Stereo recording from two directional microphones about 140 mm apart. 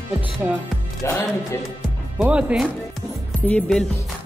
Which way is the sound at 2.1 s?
10° right (ahead or behind).